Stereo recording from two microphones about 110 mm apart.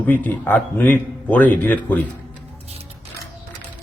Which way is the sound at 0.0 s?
15° left (ahead or behind).